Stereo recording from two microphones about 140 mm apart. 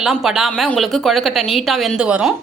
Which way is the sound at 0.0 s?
Centre (ahead or behind).